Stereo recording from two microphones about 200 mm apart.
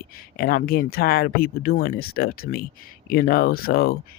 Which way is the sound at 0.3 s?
50° left (ahead or behind).